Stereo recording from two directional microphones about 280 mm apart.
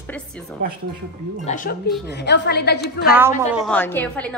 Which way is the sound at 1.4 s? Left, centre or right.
Left.